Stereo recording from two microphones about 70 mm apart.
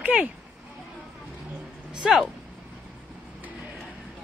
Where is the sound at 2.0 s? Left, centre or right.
Centre.